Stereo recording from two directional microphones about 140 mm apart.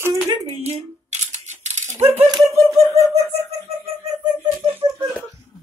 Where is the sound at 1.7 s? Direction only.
50° right (ahead or behind).